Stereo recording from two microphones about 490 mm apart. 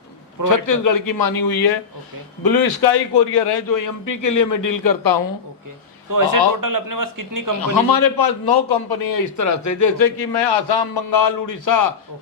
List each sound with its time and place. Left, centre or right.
0.4 s a man's voice: left
6.1 s a man's voice: right
7.6 s a man's voice: left